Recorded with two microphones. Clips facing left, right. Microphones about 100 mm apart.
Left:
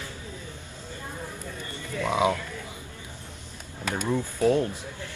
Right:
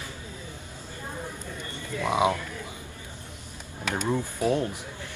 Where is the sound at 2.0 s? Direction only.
20° right (ahead or behind).